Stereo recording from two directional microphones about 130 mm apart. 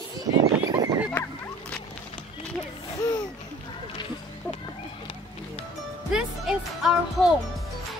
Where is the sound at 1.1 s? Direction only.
15° left (ahead or behind).